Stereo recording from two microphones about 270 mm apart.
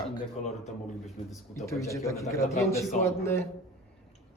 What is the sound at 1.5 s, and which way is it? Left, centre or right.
A man's voice, centre.